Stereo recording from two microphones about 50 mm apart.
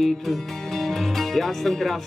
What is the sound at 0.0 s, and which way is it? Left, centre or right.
Speech, centre.